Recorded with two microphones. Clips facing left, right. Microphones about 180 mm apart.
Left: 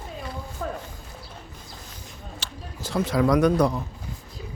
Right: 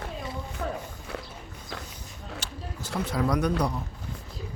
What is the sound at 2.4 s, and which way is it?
Speech, 90° left.